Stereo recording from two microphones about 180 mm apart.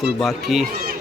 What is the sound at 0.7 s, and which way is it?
Run, 50° right (ahead or behind).